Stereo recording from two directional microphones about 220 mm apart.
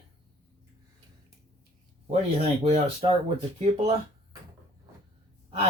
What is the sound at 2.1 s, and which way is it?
Speech, 30° right (ahead or behind).